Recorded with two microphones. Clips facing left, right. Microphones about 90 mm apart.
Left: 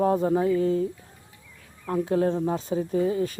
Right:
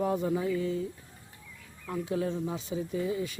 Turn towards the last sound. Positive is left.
turn(degrees=45)  # may be behind; listen again after turning